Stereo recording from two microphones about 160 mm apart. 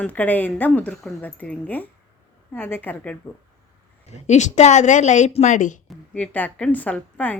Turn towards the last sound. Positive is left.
turn(degrees=10)  # may be behind; listen again after turning